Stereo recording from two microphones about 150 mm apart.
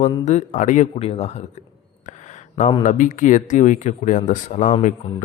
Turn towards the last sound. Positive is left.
turn(degrees=55)  # may be behind; listen again after turning